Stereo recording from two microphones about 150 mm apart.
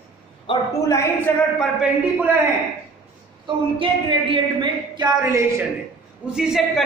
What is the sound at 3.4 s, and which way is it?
A woman's voice, 35° right (ahead or behind).